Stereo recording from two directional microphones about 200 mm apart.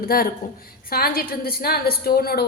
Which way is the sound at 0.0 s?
45° left (ahead or behind).